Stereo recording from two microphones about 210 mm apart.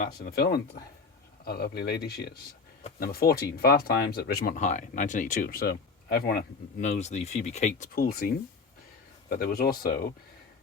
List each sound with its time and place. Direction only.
0.0 s speech: 50° left (ahead or behind)
6.8 s speech: 30° left (ahead or behind)
9.3 s speech: 45° left (ahead or behind)